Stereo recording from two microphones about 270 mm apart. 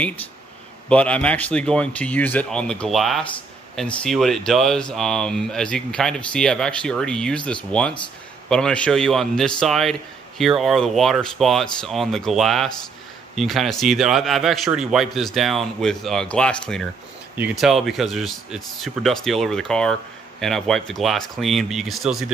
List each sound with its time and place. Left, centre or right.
0.8 s speech: centre